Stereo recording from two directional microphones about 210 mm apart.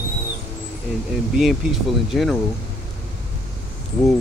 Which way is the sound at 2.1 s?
Centre (ahead or behind).